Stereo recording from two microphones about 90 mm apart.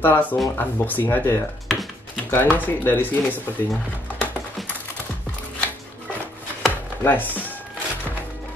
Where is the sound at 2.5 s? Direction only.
20° left (ahead or behind).